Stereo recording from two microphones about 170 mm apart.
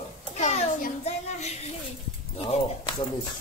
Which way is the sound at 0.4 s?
45° left (ahead or behind).